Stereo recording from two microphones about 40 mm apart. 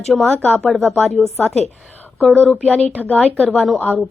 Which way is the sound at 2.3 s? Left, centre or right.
Left.